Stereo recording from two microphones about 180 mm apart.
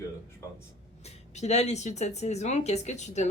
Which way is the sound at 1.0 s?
40° left (ahead or behind).